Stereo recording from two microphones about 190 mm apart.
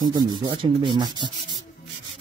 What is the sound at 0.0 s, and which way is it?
Rub, 20° right (ahead or behind).